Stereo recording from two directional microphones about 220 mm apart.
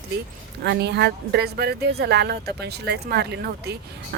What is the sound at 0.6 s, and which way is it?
Speech, 50° right (ahead or behind).